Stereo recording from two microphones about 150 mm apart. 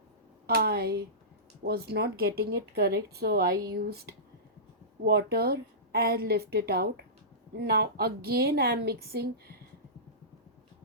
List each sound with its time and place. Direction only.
0.4 s speech: 90° right
5.0 s speech: 90° right